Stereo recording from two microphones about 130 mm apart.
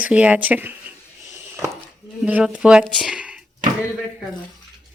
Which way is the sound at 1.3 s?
20° right (ahead or behind).